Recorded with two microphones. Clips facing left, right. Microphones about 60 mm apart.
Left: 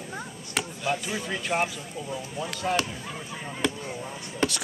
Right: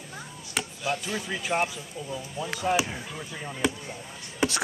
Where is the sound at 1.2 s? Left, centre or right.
Centre.